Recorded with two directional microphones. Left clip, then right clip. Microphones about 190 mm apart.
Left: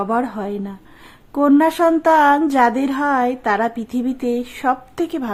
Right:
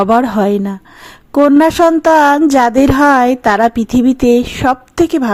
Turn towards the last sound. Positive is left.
turn(degrees=-30)  # may be behind; listen again after turning